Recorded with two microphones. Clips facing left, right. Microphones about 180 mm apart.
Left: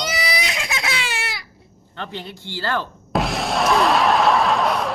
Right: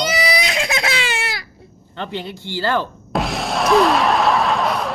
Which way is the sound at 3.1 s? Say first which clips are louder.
Even; centre (ahead or behind).